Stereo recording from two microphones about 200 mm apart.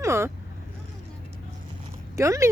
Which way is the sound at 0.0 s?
15° right (ahead or behind).